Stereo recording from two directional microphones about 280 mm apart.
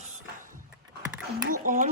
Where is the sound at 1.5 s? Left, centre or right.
Right.